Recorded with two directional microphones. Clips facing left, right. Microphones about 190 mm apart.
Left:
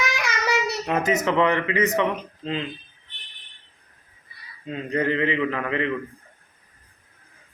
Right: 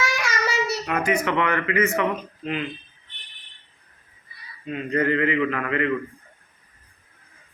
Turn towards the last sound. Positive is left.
turn(degrees=20)  # may be behind; listen again after turning